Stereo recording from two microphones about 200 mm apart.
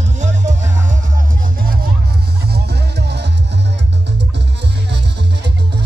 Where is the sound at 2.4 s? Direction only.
55° right (ahead or behind).